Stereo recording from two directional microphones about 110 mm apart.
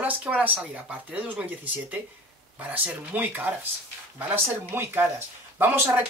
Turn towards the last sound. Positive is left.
turn(degrees=-20)  # may be behind; listen again after turning